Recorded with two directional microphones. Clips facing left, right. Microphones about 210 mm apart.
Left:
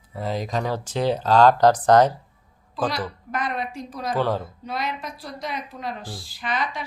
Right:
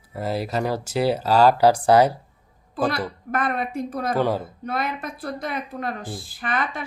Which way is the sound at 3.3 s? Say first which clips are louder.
Right 4 dB; 55° right (ahead or behind).